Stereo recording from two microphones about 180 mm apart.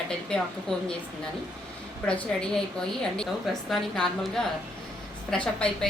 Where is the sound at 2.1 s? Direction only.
5° left (ahead or behind).